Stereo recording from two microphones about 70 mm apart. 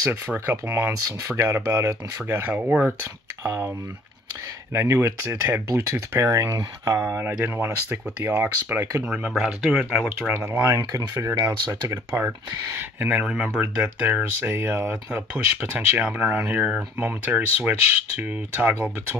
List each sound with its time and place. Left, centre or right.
0.1 s speech: right
2.4 s speech: centre
3.4 s speech: right
4.7 s speech: right
7.4 s speech: right
9.0 s speech: centre
9.3 s speech: centre
10.3 s speech: right
10.6 s speech: right
12.7 s speech: right
15.0 s speech: right